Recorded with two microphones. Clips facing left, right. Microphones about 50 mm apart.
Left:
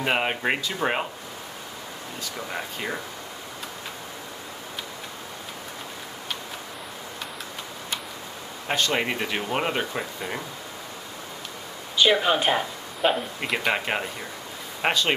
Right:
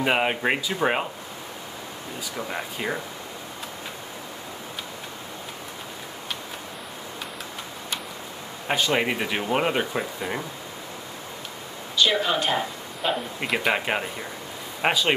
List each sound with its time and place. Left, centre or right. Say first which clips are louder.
0.0 s speech: right 2 dB; centre
2.3 s speech: right 2 dB; centre
8.6 s speech: right 2 dB; centre
12.0 s speech: left 2 dB; centre
13.4 s speech: right 1 dB; centre